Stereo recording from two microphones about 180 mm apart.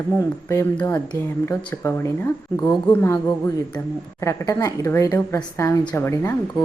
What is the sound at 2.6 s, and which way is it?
Speech, 15° left (ahead or behind).